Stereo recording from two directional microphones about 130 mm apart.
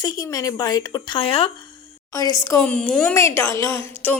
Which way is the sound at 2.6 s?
10° left (ahead or behind).